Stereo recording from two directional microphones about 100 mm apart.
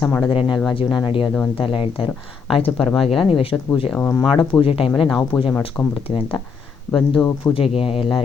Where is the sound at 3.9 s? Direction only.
15° left (ahead or behind).